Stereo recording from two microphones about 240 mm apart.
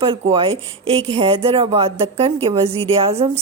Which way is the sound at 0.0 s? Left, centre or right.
Right.